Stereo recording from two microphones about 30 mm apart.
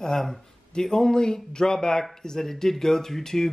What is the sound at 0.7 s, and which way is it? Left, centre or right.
Speech, left.